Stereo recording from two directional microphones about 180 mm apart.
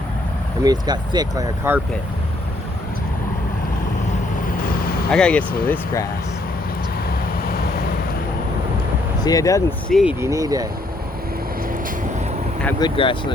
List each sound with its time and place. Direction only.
0.6 s speech: 20° right (ahead or behind)
4.4 s vehicle: 55° left (ahead or behind)
5.1 s speech: 5° left (ahead or behind)
5.7 s speech: 15° left (ahead or behind)
7.4 s vehicle: 55° left (ahead or behind)
9.2 s speech: 20° left (ahead or behind)
9.9 s speech: 5° right (ahead or behind)
10.2 s speech: 15° right (ahead or behind)
12.8 s speech: 30° left (ahead or behind)